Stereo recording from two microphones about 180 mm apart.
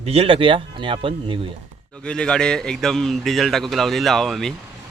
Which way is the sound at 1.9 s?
5° left (ahead or behind).